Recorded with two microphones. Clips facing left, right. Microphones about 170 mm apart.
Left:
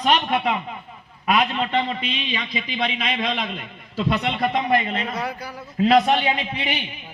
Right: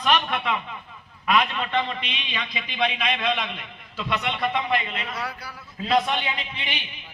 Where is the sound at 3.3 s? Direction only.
40° left (ahead or behind).